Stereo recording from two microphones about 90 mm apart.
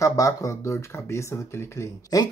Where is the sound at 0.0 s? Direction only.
40° left (ahead or behind).